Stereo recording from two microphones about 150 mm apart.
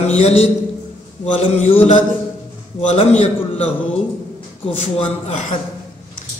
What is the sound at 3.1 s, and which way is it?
Speech, 45° left (ahead or behind).